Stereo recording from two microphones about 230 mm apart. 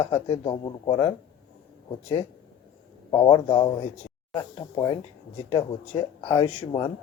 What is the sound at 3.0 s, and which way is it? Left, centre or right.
A man's voice, centre.